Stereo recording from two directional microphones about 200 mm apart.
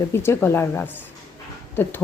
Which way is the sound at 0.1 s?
10° left (ahead or behind).